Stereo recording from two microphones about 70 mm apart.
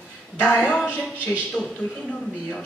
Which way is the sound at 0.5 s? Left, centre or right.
Centre.